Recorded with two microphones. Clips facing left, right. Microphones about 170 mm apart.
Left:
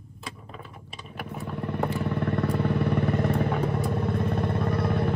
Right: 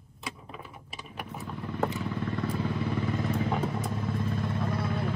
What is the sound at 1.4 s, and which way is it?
Vehicle, 65° left (ahead or behind).